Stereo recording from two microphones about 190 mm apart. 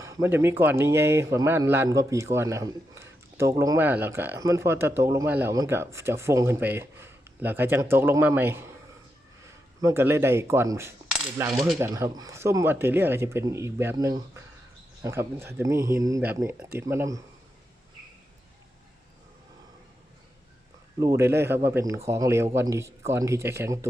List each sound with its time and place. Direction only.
0.0 s speech: 15° right (ahead or behind)
9.8 s speech: 10° right (ahead or behind)
21.0 s speech: 15° right (ahead or behind)